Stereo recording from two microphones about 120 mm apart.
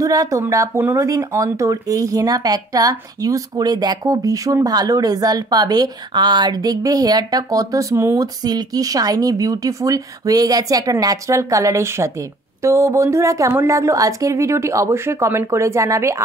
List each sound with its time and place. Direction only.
0.0 s speech: 30° right (ahead or behind)